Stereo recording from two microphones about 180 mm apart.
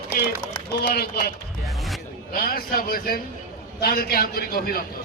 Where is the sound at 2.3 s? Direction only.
55° left (ahead or behind).